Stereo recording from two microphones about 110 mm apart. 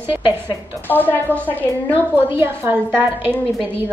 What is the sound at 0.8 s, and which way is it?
Speech, 15° left (ahead or behind).